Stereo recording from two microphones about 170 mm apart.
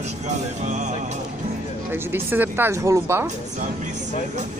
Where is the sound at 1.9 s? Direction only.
10° right (ahead or behind).